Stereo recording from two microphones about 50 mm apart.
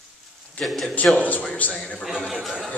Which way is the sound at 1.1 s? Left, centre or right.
Left.